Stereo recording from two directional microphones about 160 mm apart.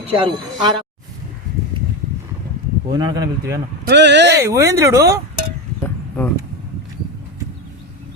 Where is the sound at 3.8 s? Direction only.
90° right.